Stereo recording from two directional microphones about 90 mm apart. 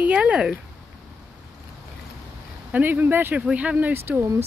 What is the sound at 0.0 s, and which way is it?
Speech, 15° right (ahead or behind).